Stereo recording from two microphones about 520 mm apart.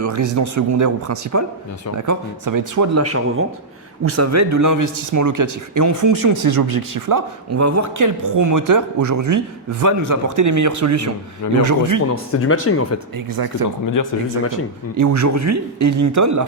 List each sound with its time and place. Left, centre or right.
0.0 s speech: right
12.1 s speech: left
13.1 s speech: right
13.9 s speech: left
14.9 s speech: right